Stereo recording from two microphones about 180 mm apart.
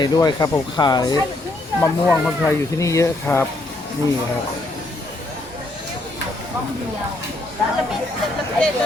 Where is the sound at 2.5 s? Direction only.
15° left (ahead or behind).